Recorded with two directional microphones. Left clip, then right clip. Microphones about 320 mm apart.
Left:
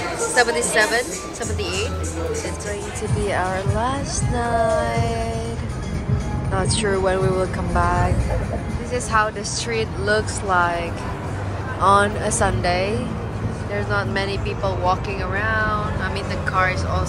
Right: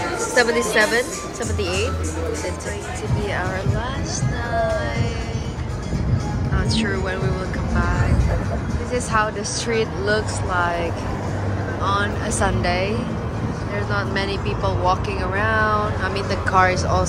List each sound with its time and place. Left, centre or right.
0.3 s speech: centre
3.3 s speech: centre
6.5 s speech: centre
13.9 s speech: centre